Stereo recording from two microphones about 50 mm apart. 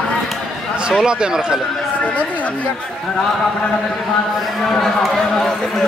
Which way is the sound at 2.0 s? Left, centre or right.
Left.